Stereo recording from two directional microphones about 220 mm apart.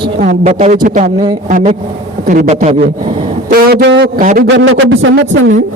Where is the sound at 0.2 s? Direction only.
30° right (ahead or behind).